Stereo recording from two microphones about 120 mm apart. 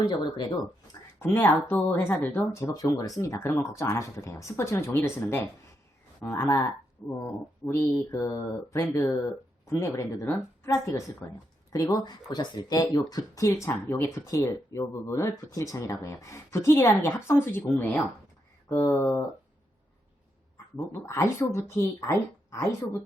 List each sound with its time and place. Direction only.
0.0 s speech: 40° left (ahead or behind)
1.2 s speech: 20° left (ahead or behind)
2.5 s speech: 25° left (ahead or behind)
8.9 s speech: 15° left (ahead or behind)
20.7 s speech: 25° left (ahead or behind)